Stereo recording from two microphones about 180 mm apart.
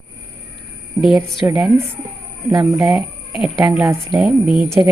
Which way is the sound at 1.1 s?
Centre (ahead or behind).